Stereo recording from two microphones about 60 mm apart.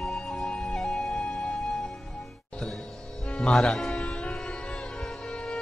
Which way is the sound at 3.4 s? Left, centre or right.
Centre.